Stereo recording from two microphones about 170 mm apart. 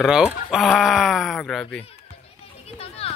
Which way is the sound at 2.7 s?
35° left (ahead or behind).